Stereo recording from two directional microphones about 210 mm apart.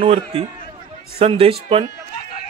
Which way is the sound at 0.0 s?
25° right (ahead or behind).